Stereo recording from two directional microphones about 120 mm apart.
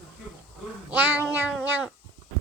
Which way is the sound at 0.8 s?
15° right (ahead or behind).